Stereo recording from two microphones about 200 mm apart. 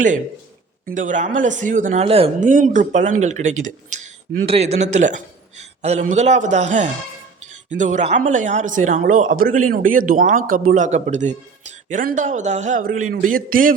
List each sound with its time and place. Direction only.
0.9 s a man's voice: 40° right (ahead or behind)
2.4 s a man's voice: 40° right (ahead or behind)